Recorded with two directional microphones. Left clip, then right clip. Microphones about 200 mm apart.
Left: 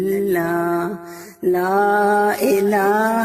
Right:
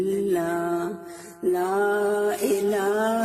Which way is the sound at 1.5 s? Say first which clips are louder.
Left 7 dB; 45° left (ahead or behind).